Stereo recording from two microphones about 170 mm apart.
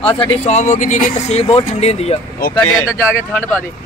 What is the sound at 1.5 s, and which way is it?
Speech, 35° left (ahead or behind).